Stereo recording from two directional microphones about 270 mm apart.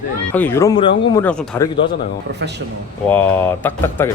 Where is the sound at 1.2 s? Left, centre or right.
Centre.